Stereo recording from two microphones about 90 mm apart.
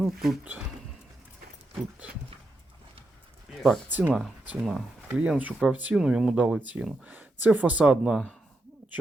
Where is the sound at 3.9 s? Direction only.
20° right (ahead or behind).